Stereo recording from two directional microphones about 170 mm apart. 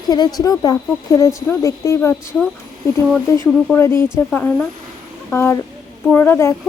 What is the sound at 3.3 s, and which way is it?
A woman's voice, 15° left (ahead or behind).